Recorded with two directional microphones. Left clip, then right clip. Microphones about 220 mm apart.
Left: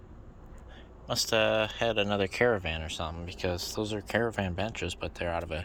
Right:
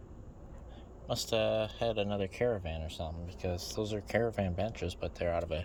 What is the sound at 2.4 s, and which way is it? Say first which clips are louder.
Speech: left 5 dB; 30° left (ahead or behind).